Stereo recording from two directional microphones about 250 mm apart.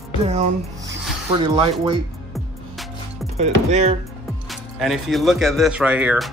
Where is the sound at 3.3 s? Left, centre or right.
Right.